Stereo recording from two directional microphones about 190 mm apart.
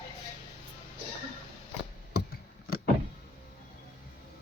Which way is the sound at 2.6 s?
50° left (ahead or behind).